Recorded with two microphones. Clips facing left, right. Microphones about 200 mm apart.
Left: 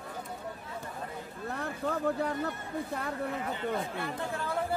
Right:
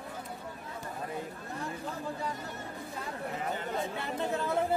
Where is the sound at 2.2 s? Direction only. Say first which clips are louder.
Left 6 dB; 60° left (ahead or behind).